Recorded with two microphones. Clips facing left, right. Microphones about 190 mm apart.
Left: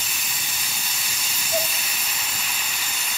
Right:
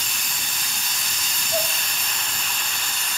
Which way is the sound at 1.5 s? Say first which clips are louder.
Even; 5° left (ahead or behind).